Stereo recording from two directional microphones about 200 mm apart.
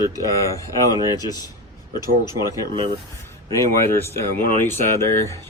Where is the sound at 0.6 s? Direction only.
15° right (ahead or behind).